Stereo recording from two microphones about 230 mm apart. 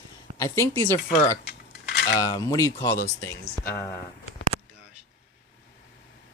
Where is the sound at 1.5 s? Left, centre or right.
Left.